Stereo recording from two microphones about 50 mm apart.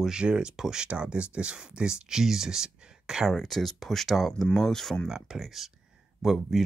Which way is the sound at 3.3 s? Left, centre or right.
Centre.